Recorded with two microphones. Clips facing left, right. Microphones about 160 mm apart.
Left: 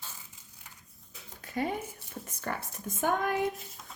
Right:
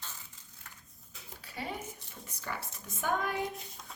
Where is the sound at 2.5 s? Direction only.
55° left (ahead or behind).